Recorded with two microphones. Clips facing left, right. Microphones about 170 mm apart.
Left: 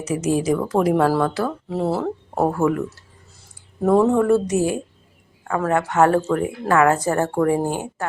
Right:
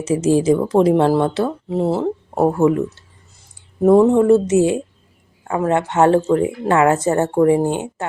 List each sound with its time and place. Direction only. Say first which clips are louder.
0.0 s speech: right 5 dB; 30° right (ahead or behind)
3.8 s speech: right 5 dB; 20° right (ahead or behind)